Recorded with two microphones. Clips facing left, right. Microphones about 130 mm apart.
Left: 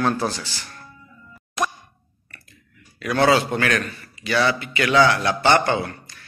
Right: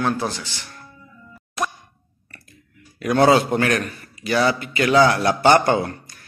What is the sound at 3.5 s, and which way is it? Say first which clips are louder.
A man's voice: right 2 dB; 35° right (ahead or behind).